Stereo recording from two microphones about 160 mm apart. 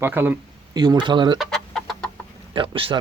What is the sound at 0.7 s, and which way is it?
Speech, 25° right (ahead or behind).